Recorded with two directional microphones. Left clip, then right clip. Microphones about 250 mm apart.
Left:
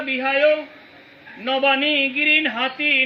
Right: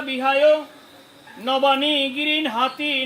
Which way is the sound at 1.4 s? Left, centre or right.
Centre.